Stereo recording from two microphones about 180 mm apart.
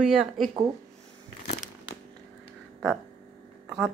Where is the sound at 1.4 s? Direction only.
35° left (ahead or behind).